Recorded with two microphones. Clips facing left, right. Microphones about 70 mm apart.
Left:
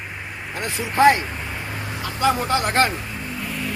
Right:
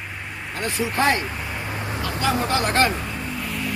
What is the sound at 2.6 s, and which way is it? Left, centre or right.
Speech, left.